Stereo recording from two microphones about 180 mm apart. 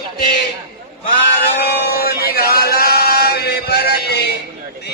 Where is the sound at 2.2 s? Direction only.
60° left (ahead or behind).